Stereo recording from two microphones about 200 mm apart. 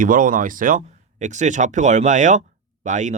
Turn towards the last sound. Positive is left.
turn(degrees=-40)  # may be behind; listen again after turning